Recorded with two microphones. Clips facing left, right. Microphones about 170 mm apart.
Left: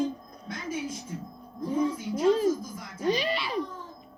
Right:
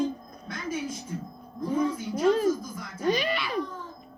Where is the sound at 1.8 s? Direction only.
25° left (ahead or behind).